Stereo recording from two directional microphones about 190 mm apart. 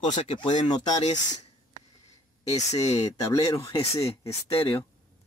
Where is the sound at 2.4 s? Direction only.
35° left (ahead or behind).